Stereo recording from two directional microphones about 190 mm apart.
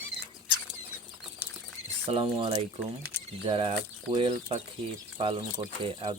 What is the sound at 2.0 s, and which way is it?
Speech, 30° right (ahead or behind).